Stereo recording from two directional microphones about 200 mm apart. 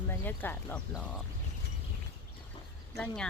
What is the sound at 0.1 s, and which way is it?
Speech, 10° left (ahead or behind).